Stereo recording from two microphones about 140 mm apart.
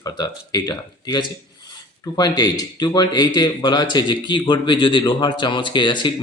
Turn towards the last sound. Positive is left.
turn(degrees=35)  # may be behind; listen again after turning